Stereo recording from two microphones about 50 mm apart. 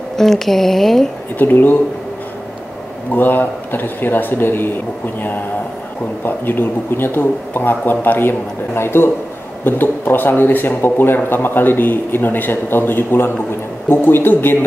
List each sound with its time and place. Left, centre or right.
0.1 s speech: centre
1.4 s speech: left
3.1 s a man's voice: left
9.7 s speech: left